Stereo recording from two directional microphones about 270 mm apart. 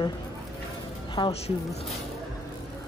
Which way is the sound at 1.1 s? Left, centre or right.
Centre.